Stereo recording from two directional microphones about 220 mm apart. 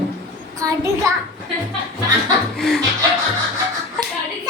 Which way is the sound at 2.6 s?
Centre (ahead or behind).